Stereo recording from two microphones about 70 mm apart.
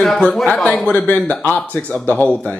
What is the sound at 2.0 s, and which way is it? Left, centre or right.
Speech, left.